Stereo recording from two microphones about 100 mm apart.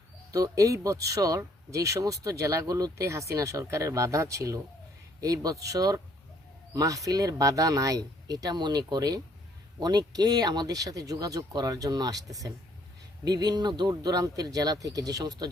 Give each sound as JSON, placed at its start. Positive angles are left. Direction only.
{"t": 0.3, "sound": "speech", "side_deg": -35}